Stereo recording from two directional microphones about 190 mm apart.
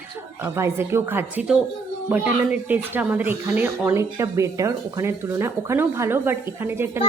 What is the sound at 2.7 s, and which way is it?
Speech, 10° right (ahead or behind).